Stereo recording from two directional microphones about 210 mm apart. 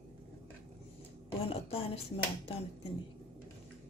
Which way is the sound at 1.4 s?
25° left (ahead or behind).